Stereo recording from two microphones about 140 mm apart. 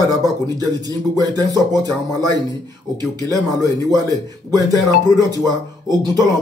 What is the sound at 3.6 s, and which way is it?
Speech, 25° right (ahead or behind).